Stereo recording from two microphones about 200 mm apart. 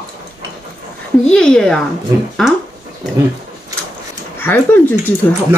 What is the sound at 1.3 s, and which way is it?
Speech, 5° left (ahead or behind).